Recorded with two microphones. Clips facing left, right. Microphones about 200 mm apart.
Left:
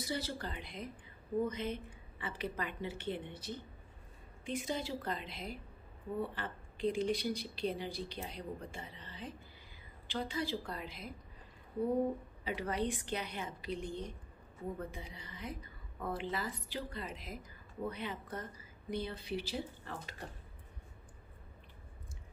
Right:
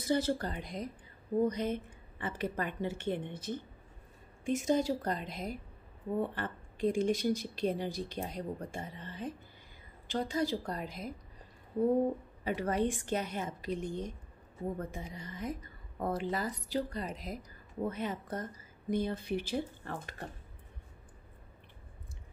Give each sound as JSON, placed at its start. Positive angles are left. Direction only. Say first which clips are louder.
{"t": 0.0, "sound": "a woman's voice", "louder": "right 8 dB", "side_deg": -50}
{"t": 12.4, "sound": "a woman's voice", "louder": "right 5 dB", "side_deg": -45}